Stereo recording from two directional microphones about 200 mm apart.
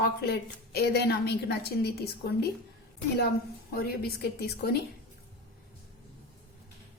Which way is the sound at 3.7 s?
50° left (ahead or behind).